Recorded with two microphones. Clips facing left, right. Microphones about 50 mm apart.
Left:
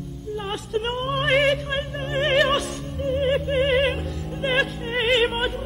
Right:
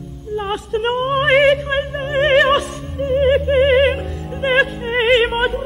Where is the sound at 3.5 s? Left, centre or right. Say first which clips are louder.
Right 7 dB; right.